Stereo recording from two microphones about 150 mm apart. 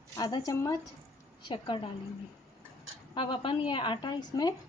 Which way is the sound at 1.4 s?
35° left (ahead or behind).